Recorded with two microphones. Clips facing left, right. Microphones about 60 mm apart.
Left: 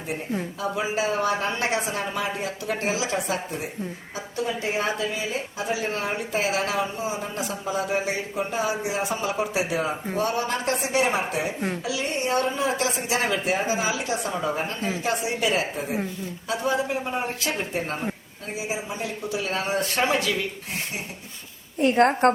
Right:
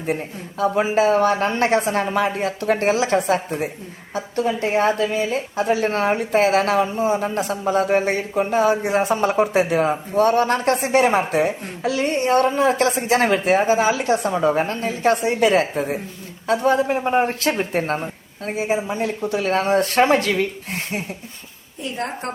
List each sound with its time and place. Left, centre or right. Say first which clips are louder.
0.8 s speech: right 8 dB; right
21.8 s a woman's voice: left 9 dB; left